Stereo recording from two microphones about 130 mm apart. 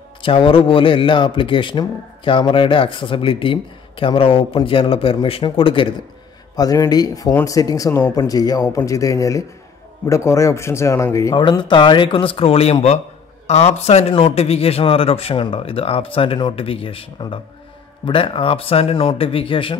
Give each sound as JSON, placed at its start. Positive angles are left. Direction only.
{"t": 0.2, "sound": "speech", "side_deg": 40}
{"t": 6.5, "sound": "speech", "side_deg": 30}
{"t": 11.3, "sound": "speech", "side_deg": 35}